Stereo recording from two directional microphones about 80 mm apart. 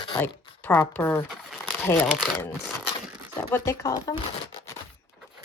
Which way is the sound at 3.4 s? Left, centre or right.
Left.